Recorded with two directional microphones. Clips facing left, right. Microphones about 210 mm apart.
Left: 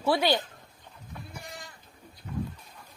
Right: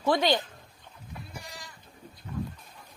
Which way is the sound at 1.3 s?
55° left (ahead or behind).